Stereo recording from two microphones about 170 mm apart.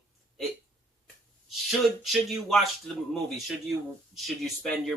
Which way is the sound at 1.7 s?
Centre (ahead or behind).